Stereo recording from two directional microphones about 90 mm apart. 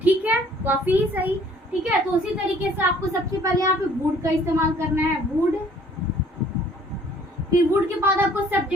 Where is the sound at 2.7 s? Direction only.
35° right (ahead or behind).